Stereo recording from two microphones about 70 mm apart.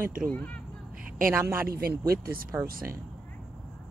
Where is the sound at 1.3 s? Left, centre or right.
Right.